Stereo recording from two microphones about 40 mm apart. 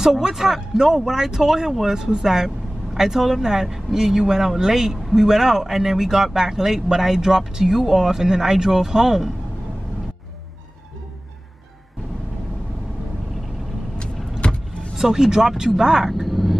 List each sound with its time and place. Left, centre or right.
0.2 s speech: centre
14.4 s vehicle: left
15.0 s speech: centre
16.3 s frog: centre